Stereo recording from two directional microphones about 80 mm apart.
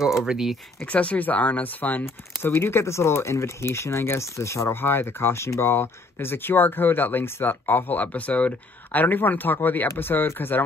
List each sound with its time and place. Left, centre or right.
0.0 s speech: centre
0.8 s speech: centre